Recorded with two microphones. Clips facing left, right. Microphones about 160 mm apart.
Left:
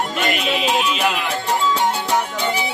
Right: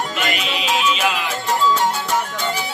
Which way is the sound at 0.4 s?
55° left (ahead or behind).